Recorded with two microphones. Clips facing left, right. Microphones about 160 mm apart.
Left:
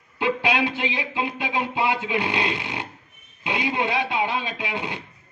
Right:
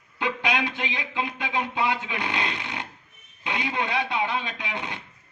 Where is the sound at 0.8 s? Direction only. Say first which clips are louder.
Left 3 dB; 20° left (ahead or behind).